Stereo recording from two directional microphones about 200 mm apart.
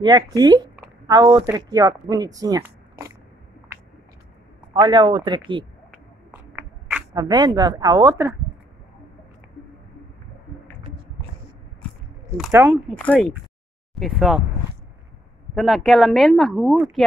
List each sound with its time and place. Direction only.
0.0 s speech: 20° right (ahead or behind)
4.7 s speech: 25° right (ahead or behind)
7.2 s speech: 20° right (ahead or behind)
12.4 s speech: 10° right (ahead or behind)
12.9 s speech: 5° left (ahead or behind)
15.5 s speech: centre (ahead or behind)